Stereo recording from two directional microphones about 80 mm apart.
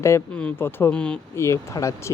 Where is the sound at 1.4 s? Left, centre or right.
Left.